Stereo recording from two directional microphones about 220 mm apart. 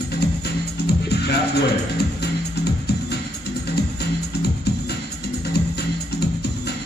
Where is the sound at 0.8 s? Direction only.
50° left (ahead or behind).